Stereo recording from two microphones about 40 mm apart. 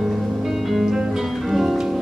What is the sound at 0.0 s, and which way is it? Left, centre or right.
Music, centre.